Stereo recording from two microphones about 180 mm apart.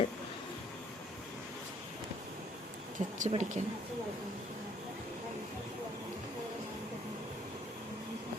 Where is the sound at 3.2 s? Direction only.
40° right (ahead or behind).